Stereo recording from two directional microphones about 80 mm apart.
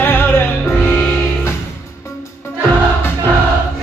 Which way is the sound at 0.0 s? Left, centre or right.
Left.